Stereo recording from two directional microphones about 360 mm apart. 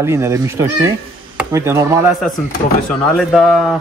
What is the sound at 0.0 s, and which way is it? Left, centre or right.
A man's voice, centre.